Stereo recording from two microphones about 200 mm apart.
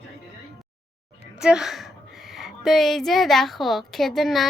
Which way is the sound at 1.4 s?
5° right (ahead or behind).